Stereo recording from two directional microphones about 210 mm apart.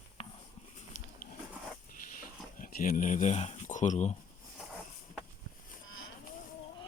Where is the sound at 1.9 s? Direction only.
40° left (ahead or behind).